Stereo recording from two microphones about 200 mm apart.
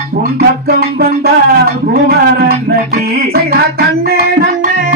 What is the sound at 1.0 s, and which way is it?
Music, 50° right (ahead or behind).